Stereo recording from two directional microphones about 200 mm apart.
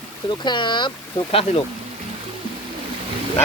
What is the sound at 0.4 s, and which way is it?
Speech, 20° left (ahead or behind).